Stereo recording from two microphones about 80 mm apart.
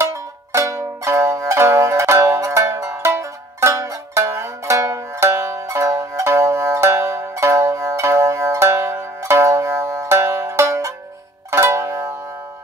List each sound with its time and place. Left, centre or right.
0.0 s music: right